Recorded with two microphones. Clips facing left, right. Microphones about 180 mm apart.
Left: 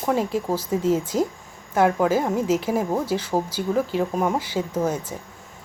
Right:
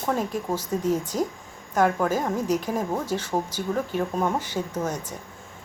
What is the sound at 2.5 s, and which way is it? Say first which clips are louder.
Speech: left 3 dB; 90° left.